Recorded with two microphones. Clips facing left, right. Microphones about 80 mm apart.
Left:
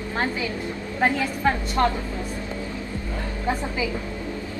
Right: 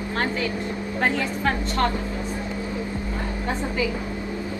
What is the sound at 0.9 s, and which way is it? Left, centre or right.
Speech, centre.